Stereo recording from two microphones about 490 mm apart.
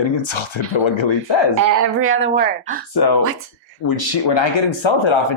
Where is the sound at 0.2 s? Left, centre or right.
Left.